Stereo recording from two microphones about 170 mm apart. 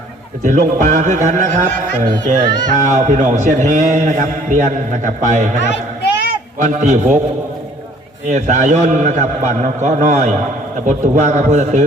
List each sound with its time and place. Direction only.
0.4 s a man's voice: 50° right (ahead or behind)
6.6 s a man's voice: 45° right (ahead or behind)
8.3 s a man's voice: 45° right (ahead or behind)